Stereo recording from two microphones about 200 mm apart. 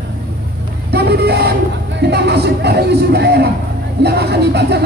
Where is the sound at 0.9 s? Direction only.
55° right (ahead or behind).